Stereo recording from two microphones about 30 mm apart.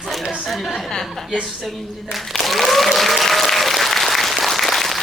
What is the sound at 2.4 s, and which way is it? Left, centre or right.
Applause, centre.